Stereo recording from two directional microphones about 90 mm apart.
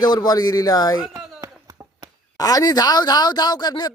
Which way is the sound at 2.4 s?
45° left (ahead or behind).